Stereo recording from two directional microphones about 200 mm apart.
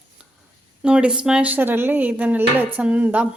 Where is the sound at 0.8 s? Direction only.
5° right (ahead or behind).